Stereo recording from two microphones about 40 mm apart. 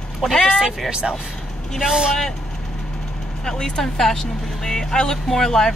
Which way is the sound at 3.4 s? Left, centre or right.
Centre.